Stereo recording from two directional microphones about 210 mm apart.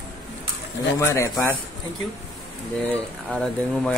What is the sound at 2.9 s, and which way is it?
Speech, 5° left (ahead or behind).